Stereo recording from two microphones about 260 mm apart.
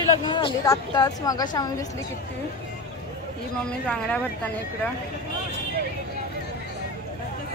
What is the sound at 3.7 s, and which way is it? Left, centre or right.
Speech, centre.